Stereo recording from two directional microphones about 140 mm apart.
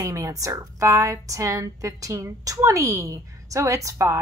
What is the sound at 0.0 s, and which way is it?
A woman's voice, 25° right (ahead or behind).